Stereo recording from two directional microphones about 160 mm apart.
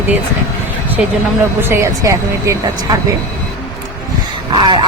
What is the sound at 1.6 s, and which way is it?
Speech, 15° right (ahead or behind).